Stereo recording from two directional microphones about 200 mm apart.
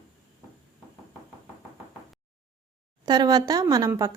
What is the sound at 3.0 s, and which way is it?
Speech, 20° right (ahead or behind).